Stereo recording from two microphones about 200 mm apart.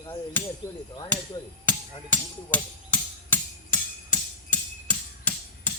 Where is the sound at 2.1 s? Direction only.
10° left (ahead or behind).